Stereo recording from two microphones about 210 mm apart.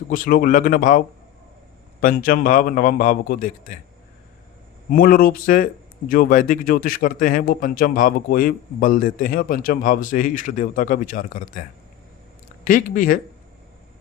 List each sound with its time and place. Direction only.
0.1 s speech: 45° left (ahead or behind)
4.9 s speech: 45° left (ahead or behind)
12.6 s speech: 40° left (ahead or behind)